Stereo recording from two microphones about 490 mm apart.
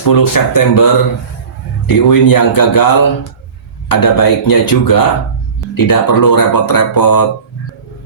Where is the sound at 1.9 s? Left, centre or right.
Left.